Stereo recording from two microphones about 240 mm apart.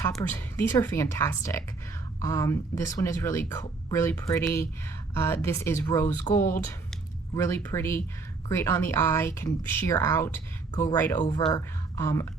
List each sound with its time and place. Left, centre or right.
0.0 s speech: centre